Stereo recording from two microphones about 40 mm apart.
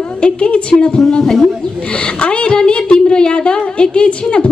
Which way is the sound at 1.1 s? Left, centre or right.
Centre.